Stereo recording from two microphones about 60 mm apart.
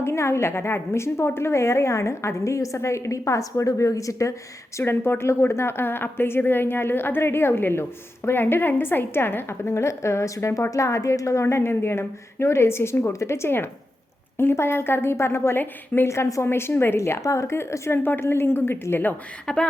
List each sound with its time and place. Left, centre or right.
0.0 s a woman's voice: left
4.8 s a woman's voice: left
16.0 s a woman's voice: left
17.0 s a woman's voice: left
19.5 s speech: centre